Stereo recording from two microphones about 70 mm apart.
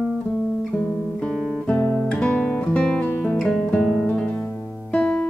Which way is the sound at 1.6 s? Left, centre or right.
Left.